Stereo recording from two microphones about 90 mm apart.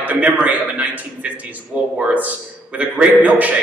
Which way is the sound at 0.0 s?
15° right (ahead or behind).